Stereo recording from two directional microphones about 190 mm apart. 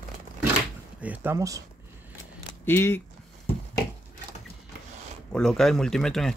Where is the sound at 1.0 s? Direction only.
10° right (ahead or behind).